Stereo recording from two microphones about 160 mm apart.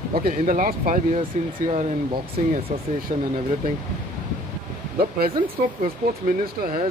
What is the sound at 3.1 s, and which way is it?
Speech, 50° right (ahead or behind).